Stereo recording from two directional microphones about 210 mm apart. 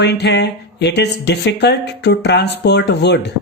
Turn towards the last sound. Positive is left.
turn(degrees=55)  # may be behind; listen again after turning